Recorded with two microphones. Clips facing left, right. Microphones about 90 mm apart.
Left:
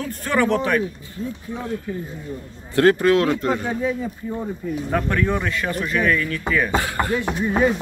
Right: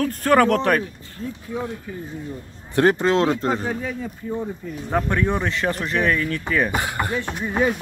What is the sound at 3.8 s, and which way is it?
Speech, 10° left (ahead or behind).